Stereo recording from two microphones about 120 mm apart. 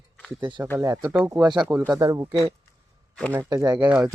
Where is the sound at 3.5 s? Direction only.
30° right (ahead or behind).